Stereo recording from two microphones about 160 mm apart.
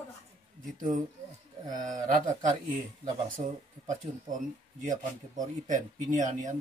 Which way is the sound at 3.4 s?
50° right (ahead or behind).